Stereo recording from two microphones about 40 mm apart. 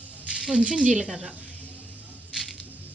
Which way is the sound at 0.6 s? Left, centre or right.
Right.